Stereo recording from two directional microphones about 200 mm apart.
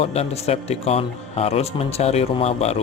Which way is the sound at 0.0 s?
30° left (ahead or behind).